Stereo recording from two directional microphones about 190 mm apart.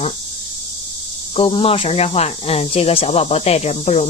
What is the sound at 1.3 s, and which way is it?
Speech, 30° left (ahead or behind).